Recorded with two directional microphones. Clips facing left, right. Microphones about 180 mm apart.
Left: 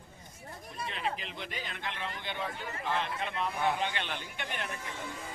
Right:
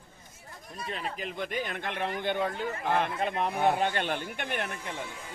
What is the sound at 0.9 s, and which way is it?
Speech, 45° right (ahead or behind).